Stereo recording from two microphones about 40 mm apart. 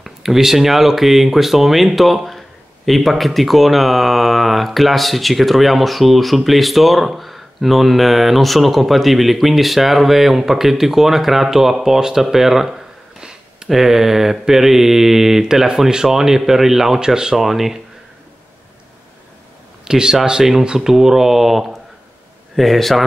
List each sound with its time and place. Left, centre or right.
0.0 s speech: centre
13.2 s a sound: centre
13.7 s mantra: centre
17.4 s speech: centre
19.8 s mantra: centre
22.6 s speech: centre